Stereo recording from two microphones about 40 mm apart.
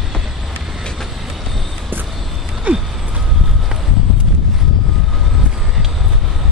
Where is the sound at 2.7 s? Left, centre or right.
Right.